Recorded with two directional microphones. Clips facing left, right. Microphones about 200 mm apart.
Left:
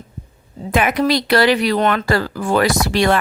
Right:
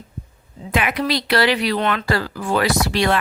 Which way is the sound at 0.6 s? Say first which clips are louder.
Left 5 dB; 45° left (ahead or behind).